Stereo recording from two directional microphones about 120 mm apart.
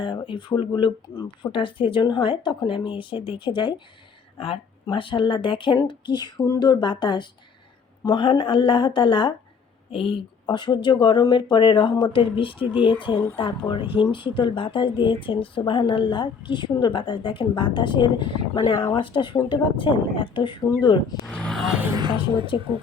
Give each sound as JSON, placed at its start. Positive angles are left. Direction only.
{"t": 0.0, "sound": "speech", "side_deg": 40}
{"t": 21.9, "sound": "a woman's voice", "side_deg": -40}